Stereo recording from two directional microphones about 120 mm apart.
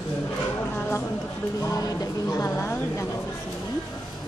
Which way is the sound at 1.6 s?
30° left (ahead or behind).